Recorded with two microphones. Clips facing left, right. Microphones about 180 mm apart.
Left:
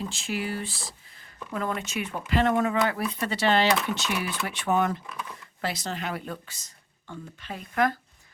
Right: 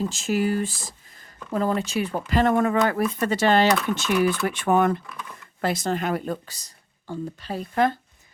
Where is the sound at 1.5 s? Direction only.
35° right (ahead or behind).